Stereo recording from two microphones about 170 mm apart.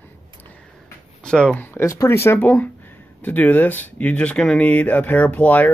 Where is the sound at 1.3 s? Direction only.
5° left (ahead or behind).